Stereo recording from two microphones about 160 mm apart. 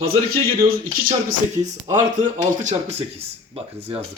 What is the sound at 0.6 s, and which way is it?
Speech, 65° right (ahead or behind).